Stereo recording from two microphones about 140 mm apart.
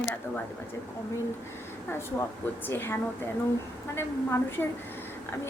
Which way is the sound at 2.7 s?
15° left (ahead or behind).